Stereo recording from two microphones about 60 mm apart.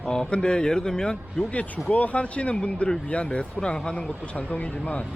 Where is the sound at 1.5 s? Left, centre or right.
Left.